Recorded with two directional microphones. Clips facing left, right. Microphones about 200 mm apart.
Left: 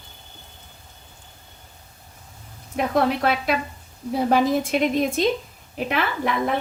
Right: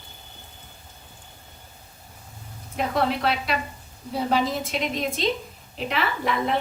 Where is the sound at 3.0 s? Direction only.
50° left (ahead or behind).